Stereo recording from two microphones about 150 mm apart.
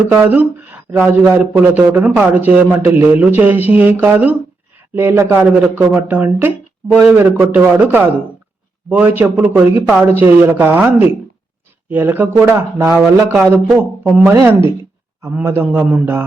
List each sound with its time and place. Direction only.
0.1 s speech: 10° right (ahead or behind)
14.3 s speech: 15° right (ahead or behind)